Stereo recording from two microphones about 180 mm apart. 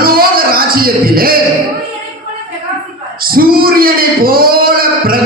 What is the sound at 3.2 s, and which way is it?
Speech, 55° right (ahead or behind).